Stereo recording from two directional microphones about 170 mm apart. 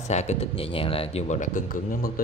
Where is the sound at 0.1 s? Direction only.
40° left (ahead or behind).